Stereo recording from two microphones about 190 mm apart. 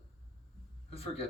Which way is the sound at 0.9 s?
30° left (ahead or behind).